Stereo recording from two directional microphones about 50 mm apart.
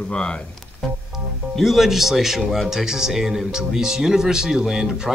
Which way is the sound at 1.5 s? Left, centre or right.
Centre.